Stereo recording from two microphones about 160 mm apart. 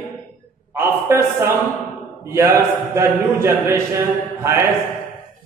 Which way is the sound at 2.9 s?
15° right (ahead or behind).